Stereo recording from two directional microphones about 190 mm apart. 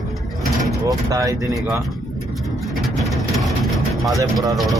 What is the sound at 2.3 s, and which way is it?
Vehicle, centre (ahead or behind).